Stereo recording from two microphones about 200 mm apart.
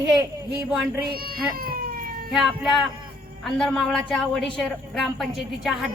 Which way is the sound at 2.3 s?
Centre (ahead or behind).